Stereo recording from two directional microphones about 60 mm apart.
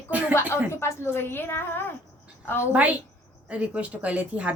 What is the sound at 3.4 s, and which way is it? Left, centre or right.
Speech, right.